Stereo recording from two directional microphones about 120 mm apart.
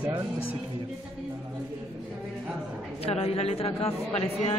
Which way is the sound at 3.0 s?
60° left (ahead or behind).